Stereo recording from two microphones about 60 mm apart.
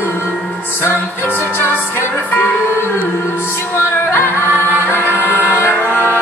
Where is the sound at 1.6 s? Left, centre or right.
Left.